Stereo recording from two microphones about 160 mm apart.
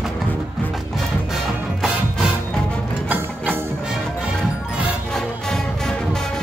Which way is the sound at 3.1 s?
10° right (ahead or behind).